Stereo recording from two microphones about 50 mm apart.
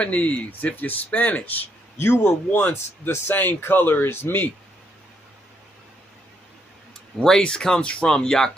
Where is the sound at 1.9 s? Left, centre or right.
Left.